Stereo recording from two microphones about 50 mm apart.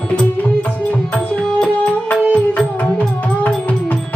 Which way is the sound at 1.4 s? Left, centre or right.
Centre.